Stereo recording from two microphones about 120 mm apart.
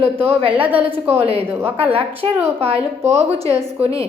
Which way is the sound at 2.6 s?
55° right (ahead or behind).